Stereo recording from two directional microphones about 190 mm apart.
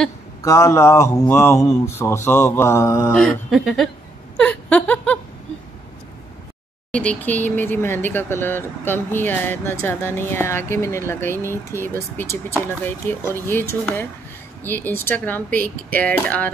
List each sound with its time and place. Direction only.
0.4 s speech: 15° left (ahead or behind)
3.1 s speech: 5° left (ahead or behind)
4.4 s laughter: 5° left (ahead or behind)
6.9 s speech: 5° left (ahead or behind)